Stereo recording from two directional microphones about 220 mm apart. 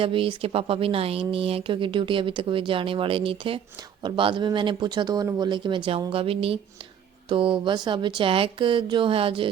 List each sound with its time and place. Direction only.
0.0 s speech: 25° right (ahead or behind)